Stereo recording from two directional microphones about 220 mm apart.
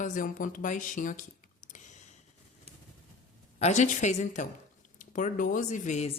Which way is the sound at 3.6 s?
35° left (ahead or behind).